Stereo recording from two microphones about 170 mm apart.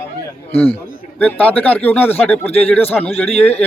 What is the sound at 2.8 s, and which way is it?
Speech, 35° left (ahead or behind).